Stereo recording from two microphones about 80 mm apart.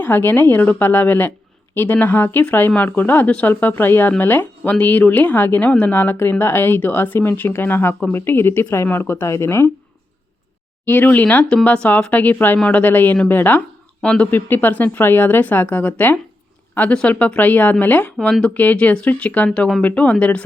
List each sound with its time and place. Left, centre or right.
0.0 s speech: left
10.8 s speech: left
14.3 s speech: left
19.5 s speech: centre